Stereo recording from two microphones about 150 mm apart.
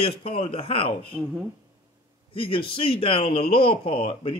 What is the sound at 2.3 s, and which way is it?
A man's voice, 35° left (ahead or behind).